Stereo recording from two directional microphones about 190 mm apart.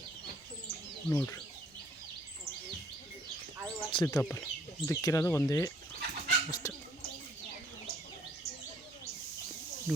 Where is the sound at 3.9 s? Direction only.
20° left (ahead or behind).